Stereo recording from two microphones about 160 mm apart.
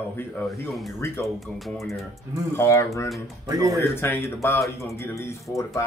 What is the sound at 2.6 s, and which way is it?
Speech, 15° left (ahead or behind).